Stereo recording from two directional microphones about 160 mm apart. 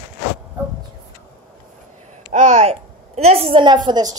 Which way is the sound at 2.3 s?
45° right (ahead or behind).